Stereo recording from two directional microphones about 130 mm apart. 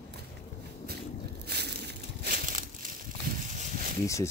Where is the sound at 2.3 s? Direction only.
90° right.